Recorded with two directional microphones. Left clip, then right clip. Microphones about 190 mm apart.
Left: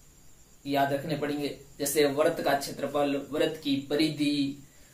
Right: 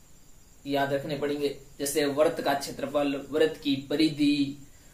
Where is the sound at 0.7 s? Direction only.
Centre (ahead or behind).